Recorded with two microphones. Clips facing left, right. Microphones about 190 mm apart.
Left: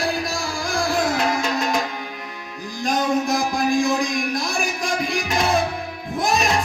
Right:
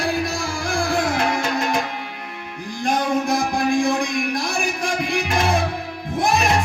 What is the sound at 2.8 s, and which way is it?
Music, 55° right (ahead or behind).